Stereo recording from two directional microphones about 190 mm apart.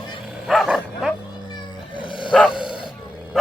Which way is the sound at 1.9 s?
25° left (ahead or behind).